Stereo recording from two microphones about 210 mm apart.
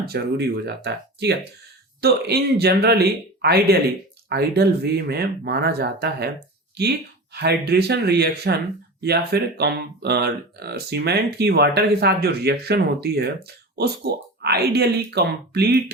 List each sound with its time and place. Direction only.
0.0 s speech: 50° right (ahead or behind)
7.3 s speech: 50° right (ahead or behind)